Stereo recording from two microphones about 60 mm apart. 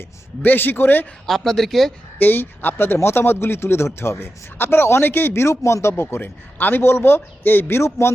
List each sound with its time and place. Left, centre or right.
0.4 s speech: left
1.3 s speech: centre
2.1 s speech: left
5.9 s speech: left
7.9 s speech: left